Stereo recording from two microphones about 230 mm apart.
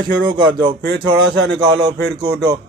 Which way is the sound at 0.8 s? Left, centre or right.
Right.